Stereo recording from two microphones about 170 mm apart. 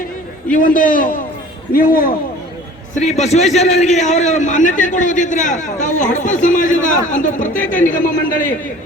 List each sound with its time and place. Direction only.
0.5 s a man's voice: 50° left (ahead or behind)
2.9 s a man's voice: 45° left (ahead or behind)